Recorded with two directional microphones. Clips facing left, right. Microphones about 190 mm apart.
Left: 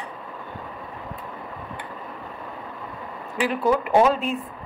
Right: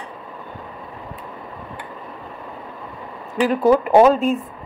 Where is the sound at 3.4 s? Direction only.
40° right (ahead or behind).